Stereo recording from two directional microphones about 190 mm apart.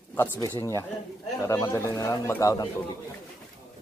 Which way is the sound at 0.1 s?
15° left (ahead or behind).